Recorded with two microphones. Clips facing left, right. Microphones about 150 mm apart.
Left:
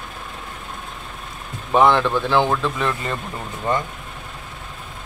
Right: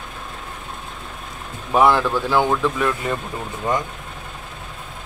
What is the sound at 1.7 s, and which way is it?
Speech, 5° right (ahead or behind).